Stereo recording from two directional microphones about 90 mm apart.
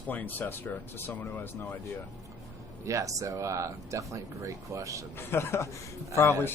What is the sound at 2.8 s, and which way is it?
Speech, 35° right (ahead or behind).